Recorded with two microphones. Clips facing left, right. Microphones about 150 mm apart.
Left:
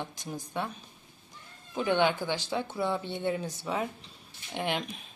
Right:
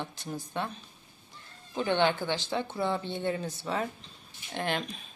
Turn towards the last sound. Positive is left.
turn(degrees=15)  # may be behind; listen again after turning